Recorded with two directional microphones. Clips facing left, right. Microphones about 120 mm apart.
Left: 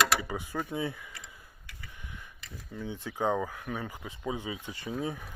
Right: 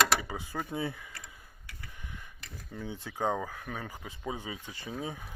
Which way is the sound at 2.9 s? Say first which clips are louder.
Left 2 dB; 35° right (ahead or behind).